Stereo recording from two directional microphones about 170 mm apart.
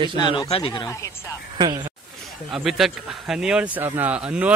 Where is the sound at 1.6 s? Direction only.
25° right (ahead or behind).